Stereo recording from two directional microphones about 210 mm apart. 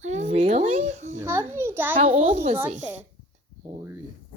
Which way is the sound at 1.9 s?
25° right (ahead or behind).